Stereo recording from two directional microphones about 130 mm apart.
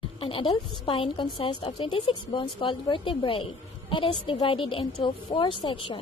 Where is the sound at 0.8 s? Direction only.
45° left (ahead or behind).